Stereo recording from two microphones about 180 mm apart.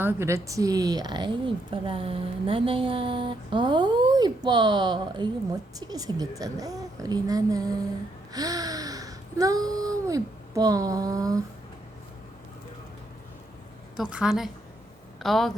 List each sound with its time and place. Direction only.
0.0 s a woman's voice: 15° right (ahead or behind)
8.3 s a sound: 20° right (ahead or behind)
13.9 s a woman's voice: 5° right (ahead or behind)